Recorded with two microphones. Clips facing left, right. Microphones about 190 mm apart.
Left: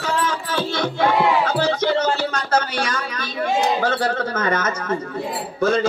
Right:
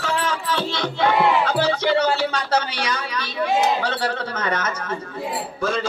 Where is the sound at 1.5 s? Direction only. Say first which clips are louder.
Even; 45° left (ahead or behind).